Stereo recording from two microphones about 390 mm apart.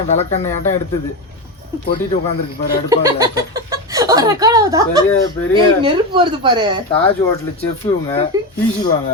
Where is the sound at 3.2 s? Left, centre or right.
Centre.